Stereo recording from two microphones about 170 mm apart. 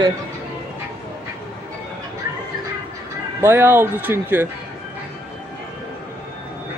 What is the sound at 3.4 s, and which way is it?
A man's voice, 15° right (ahead or behind).